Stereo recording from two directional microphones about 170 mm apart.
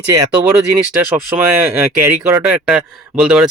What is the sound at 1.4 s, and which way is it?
A man's voice, 15° right (ahead or behind).